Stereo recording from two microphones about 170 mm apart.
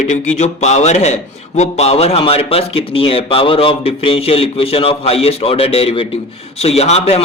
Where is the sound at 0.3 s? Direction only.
40° left (ahead or behind).